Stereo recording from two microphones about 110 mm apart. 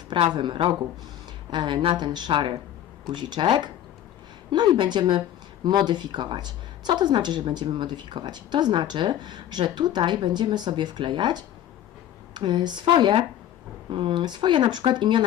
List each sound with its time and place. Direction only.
0.3 s a woman's voice: 50° right (ahead or behind)